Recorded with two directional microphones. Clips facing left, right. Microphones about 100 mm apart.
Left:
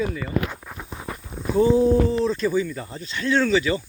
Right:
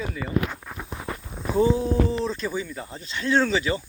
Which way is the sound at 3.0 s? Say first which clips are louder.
Left 1 dB; 25° right (ahead or behind).